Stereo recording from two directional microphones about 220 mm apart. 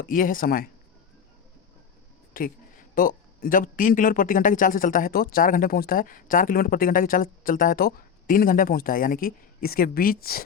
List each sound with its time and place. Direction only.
0.0 s a man's voice: 40° left (ahead or behind)
2.3 s a man's voice: 40° left (ahead or behind)